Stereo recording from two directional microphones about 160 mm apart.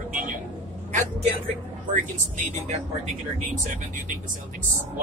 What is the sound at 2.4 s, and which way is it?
Speech, 45° right (ahead or behind).